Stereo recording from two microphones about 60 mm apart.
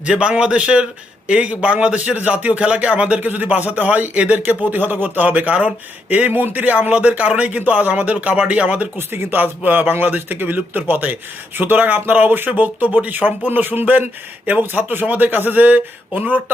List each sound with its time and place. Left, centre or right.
0.0 s a man's voice: centre
9.0 s a man's voice: right